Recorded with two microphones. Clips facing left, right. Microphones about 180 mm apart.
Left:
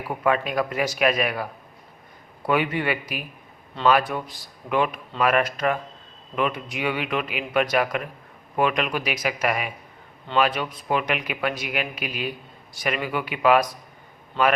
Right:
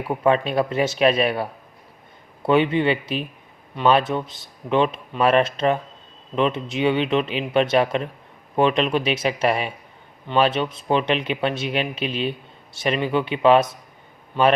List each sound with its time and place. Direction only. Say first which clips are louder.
0.1 s speech: right 4 dB; 25° right (ahead or behind)
2.5 s speech: right 5 dB; 25° right (ahead or behind)